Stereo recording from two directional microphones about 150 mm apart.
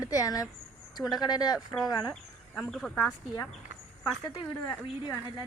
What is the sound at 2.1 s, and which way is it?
Speech, 5° left (ahead or behind).